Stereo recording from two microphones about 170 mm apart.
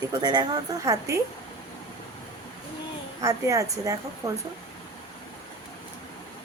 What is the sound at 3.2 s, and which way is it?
A woman's voice, 20° right (ahead or behind).